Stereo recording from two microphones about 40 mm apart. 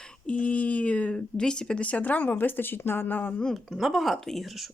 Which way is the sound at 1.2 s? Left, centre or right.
Centre.